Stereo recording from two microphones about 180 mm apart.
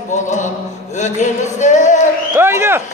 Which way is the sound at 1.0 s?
40° left (ahead or behind).